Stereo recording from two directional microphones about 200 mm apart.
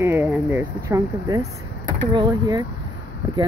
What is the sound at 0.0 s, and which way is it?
Speech, 10° right (ahead or behind).